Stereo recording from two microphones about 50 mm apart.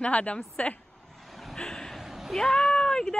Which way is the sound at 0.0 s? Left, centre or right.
Left.